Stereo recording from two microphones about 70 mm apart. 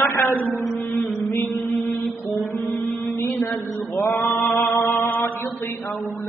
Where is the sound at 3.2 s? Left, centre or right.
Left.